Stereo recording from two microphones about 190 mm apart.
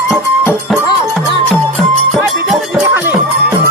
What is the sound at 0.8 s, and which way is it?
Music, 25° left (ahead or behind).